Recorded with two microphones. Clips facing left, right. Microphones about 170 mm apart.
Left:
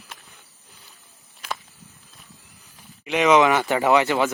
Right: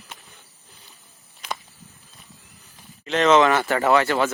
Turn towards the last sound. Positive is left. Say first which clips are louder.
# even
turn(degrees=15)  # may be behind; listen again after turning